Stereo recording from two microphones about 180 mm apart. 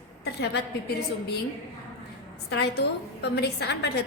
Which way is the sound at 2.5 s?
65° left (ahead or behind).